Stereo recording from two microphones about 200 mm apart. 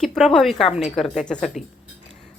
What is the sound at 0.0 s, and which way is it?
Speech, centre (ahead or behind).